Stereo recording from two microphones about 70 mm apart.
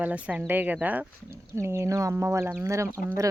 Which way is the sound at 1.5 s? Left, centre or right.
Right.